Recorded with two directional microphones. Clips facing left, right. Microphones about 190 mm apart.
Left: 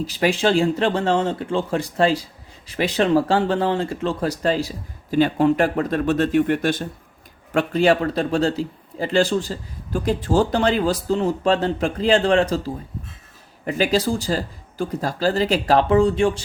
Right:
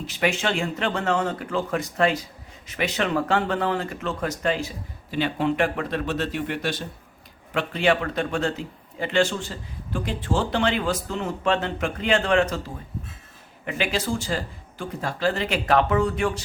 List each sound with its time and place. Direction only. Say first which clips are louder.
0.0 s a man's voice: left 5 dB; 35° left (ahead or behind)